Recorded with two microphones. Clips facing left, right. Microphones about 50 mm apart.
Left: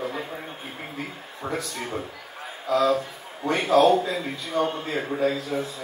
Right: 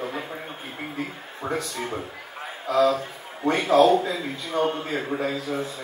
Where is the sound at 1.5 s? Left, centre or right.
Right.